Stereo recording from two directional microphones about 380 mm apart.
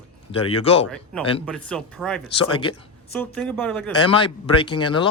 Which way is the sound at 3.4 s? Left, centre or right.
Centre.